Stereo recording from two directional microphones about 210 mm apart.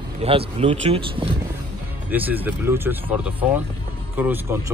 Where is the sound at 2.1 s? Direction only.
10° right (ahead or behind).